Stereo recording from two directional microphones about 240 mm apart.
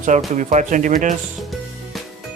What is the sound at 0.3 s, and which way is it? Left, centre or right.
Speech, right.